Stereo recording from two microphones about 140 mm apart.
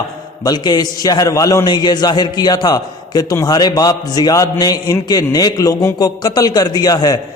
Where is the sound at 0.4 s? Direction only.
30° left (ahead or behind).